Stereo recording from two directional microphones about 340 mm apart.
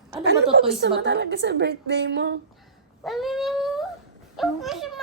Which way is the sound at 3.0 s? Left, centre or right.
Centre.